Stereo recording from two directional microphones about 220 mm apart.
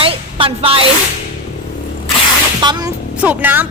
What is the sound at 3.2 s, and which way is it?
Speech, 5° right (ahead or behind).